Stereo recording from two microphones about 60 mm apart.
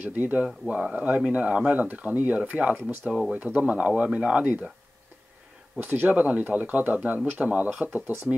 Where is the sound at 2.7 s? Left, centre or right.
Right.